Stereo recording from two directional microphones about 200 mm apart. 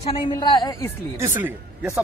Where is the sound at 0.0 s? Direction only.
25° left (ahead or behind).